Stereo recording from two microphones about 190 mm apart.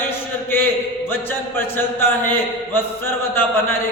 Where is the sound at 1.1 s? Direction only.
10° left (ahead or behind).